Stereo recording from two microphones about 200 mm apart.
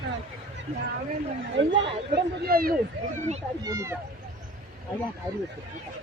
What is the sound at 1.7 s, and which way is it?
Speech, 50° right (ahead or behind).